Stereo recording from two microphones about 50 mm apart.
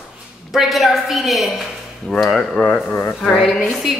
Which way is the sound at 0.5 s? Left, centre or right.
Centre.